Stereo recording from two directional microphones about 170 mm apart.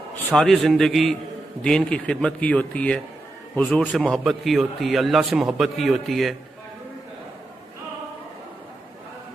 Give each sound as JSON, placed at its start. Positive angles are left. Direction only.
{"t": 0.3, "sound": "a man's voice", "side_deg": 0}